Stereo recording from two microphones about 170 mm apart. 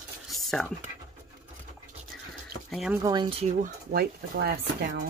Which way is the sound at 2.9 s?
25° right (ahead or behind).